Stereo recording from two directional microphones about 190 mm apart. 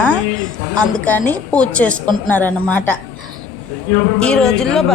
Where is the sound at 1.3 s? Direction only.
5° left (ahead or behind).